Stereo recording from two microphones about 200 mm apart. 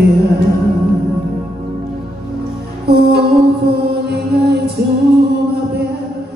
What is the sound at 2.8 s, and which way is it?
Music, 55° right (ahead or behind).